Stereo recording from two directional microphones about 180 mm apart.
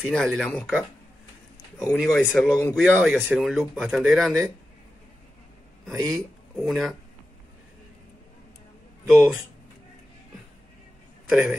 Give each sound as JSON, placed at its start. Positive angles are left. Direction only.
{"t": 0.0, "sound": "speech", "side_deg": 0}
{"t": 2.0, "sound": "speech", "side_deg": 0}
{"t": 2.8, "sound": "speech", "side_deg": -5}
{"t": 5.9, "sound": "speech", "side_deg": -20}
{"t": 6.5, "sound": "speech", "side_deg": 0}
{"t": 9.0, "sound": "speech", "side_deg": 0}
{"t": 11.2, "sound": "a man's voice", "side_deg": -5}